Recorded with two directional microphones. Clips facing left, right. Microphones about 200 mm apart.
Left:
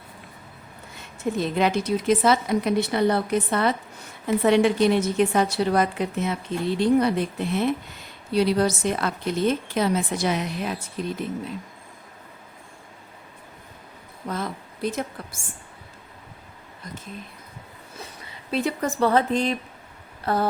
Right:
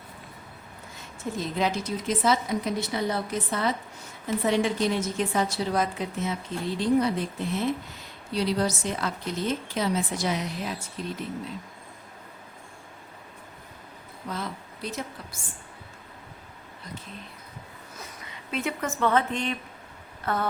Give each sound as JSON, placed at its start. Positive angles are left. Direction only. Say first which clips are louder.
{"t": 1.4, "sound": "a woman's voice", "louder": "left 5 dB", "side_deg": 65}
{"t": 14.3, "sound": "a woman's voice", "louder": "left 4 dB", "side_deg": 50}
{"t": 17.9, "sound": "speech", "louder": "left 3 dB", "side_deg": 30}
{"t": 20.2, "sound": "a sound", "louder": "left 5 dB", "side_deg": 35}